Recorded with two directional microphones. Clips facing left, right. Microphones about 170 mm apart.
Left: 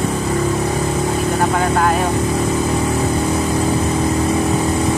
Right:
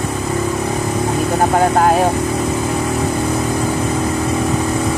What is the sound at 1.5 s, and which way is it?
Speech, 40° right (ahead or behind).